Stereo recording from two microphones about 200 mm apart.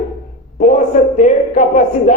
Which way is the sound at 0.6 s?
40° left (ahead or behind).